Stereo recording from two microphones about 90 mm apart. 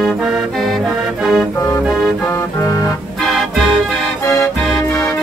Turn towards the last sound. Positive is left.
turn(degrees=35)  # may be behind; listen again after turning